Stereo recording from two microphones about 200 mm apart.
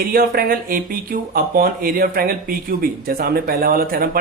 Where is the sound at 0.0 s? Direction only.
45° right (ahead or behind).